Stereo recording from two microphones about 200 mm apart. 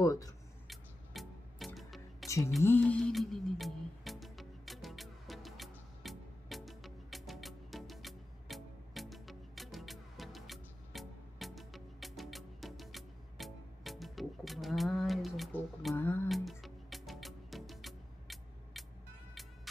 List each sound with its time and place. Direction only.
0.0 s speech: 15° left (ahead or behind)
0.7 s music: centre (ahead or behind)